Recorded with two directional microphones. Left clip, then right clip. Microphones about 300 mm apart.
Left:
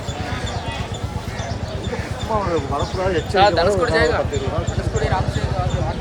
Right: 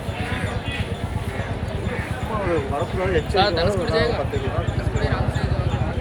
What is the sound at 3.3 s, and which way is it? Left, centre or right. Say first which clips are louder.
Speech: left 7 dB; left.